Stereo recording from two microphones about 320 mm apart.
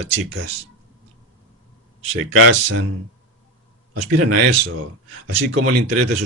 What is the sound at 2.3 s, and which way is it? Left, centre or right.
Speech, right.